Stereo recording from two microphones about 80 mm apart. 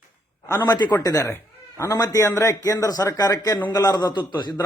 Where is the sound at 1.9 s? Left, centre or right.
Left.